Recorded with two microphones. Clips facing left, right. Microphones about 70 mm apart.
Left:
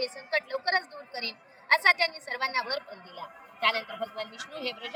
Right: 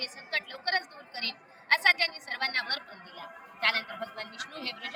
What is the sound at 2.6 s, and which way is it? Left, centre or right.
A woman's voice, right.